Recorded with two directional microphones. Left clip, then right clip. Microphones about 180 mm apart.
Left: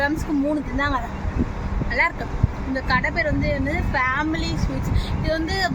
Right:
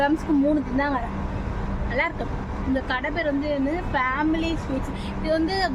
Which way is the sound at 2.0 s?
10° right (ahead or behind).